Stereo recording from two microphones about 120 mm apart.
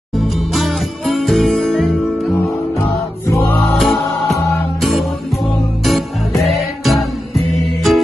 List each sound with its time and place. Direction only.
0.1 s music: centre (ahead or behind)
3.3 s music: 25° left (ahead or behind)
3.7 s music: centre (ahead or behind)
4.0 s music: 25° left (ahead or behind)
5.9 s music: centre (ahead or behind)